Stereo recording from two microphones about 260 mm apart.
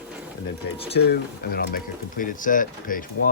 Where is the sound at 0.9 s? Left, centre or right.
Left.